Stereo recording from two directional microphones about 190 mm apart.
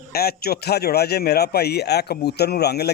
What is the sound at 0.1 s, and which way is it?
A man's voice, 55° left (ahead or behind).